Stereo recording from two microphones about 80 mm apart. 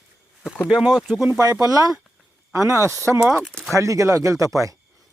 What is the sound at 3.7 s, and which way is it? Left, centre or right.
Speech, right.